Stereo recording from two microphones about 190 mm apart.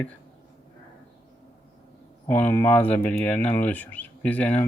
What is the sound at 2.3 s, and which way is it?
Speech, 10° left (ahead or behind).